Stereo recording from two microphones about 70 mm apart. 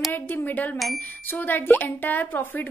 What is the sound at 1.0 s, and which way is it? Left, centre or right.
A woman's voice, left.